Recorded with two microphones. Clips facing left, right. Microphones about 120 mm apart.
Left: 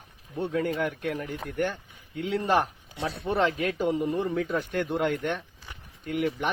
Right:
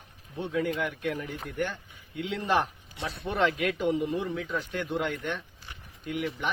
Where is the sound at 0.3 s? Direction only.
45° left (ahead or behind).